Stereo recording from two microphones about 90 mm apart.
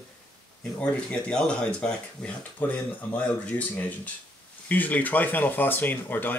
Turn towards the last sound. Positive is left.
turn(degrees=20)  # may be behind; listen again after turning